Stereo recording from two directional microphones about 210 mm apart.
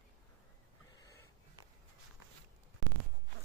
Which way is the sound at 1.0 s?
15° left (ahead or behind).